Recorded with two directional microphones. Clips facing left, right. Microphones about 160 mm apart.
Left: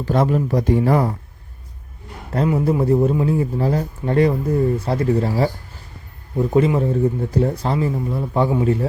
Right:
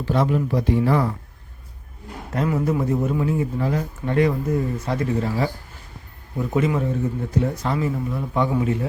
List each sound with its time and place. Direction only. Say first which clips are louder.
0.0 s a man's voice: left 3 dB; 40° left (ahead or behind)
2.3 s a man's voice: left 3 dB; 25° left (ahead or behind)
6.5 s a man's voice: left 4 dB; 30° left (ahead or behind)